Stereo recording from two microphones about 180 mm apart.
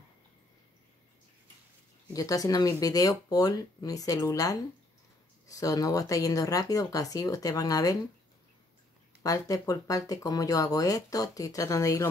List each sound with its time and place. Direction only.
2.1 s speech: 20° left (ahead or behind)
9.2 s speech: 20° left (ahead or behind)